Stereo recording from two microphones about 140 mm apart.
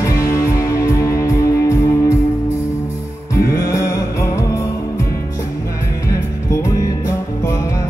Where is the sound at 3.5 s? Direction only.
25° left (ahead or behind).